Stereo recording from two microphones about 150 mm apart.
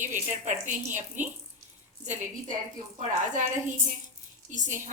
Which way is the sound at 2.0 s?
55° right (ahead or behind).